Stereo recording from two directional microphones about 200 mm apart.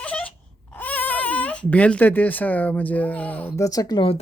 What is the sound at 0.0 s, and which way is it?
Speech, 5° left (ahead or behind).